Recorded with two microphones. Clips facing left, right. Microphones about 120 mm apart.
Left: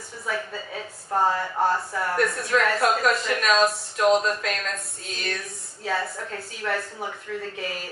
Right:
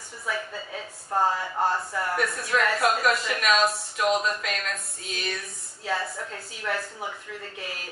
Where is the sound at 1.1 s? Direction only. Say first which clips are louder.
Left 1 dB; centre (ahead or behind).